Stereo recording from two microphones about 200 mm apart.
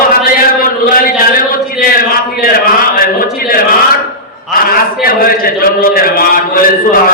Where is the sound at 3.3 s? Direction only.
45° left (ahead or behind).